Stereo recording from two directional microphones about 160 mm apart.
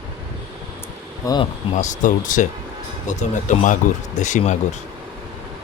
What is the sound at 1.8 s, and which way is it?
Speech, 50° left (ahead or behind).